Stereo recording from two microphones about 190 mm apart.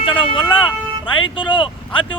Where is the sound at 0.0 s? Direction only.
25° left (ahead or behind).